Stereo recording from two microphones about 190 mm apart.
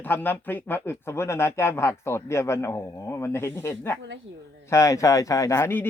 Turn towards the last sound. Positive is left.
turn(degrees=10)  # may be behind; listen again after turning